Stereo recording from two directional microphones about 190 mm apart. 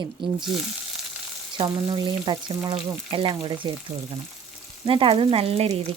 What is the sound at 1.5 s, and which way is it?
Speech, 20° right (ahead or behind).